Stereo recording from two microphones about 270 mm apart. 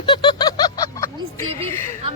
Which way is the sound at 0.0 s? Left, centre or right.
Centre.